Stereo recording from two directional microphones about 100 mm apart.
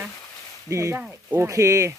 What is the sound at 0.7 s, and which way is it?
Speech, 30° right (ahead or behind).